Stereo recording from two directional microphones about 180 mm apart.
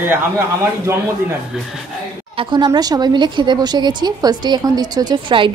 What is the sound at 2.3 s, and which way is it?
Speech, 25° right (ahead or behind).